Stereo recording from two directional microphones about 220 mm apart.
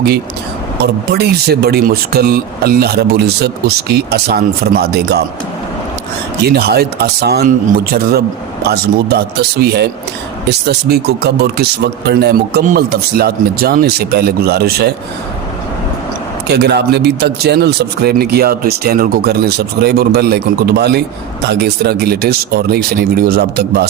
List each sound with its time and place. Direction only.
0.8 s a man's voice: 45° right (ahead or behind)
6.4 s a man's voice: 45° right (ahead or behind)
8.6 s a man's voice: 45° right (ahead or behind)
16.5 s a man's voice: 50° right (ahead or behind)